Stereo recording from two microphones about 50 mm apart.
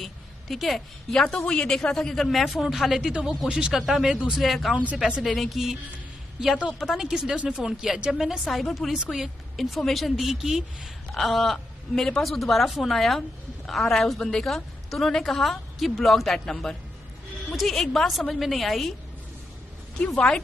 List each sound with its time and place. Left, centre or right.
0.0 s a woman's voice: centre
1.2 s speech: centre
2.6 s speech: centre
3.0 s speech: right
4.4 s a woman's voice: centre
4.9 s speech: centre
5.2 s a woman's voice: centre
6.8 s speech: centre
8.5 s a woman's voice: centre
9.6 s a woman's voice: centre
20.2 s speech: left